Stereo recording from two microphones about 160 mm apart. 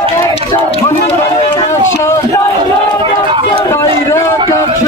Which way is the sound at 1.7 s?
15° left (ahead or behind).